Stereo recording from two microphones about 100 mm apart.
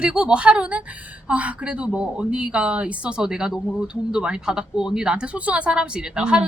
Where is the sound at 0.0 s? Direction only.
10° right (ahead or behind).